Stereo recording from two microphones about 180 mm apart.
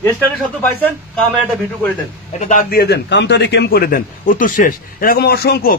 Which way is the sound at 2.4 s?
50° left (ahead or behind).